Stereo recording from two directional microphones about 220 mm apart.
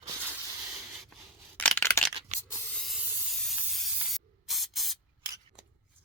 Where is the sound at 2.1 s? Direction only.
25° right (ahead or behind).